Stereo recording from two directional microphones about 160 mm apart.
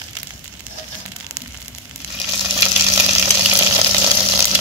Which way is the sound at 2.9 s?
10° right (ahead or behind).